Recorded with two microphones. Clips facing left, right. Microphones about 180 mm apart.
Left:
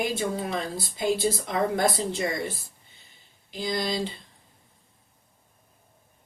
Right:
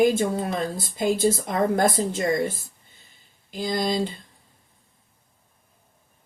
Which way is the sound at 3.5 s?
50° right (ahead or behind).